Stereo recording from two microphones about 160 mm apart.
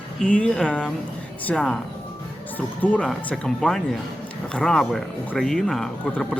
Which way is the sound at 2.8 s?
10° left (ahead or behind).